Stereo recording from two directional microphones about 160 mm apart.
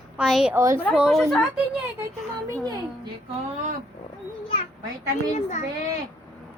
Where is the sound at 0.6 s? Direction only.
15° right (ahead or behind).